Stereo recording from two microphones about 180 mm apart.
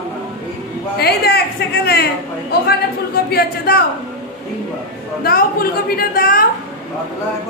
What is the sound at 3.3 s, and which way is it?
Speech, 60° left (ahead or behind).